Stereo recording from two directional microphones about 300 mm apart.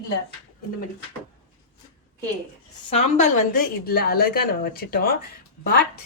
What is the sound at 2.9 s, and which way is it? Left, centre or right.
Speech, left.